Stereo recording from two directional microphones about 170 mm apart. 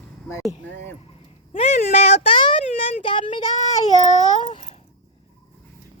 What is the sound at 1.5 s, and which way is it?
Speech, 45° left (ahead or behind).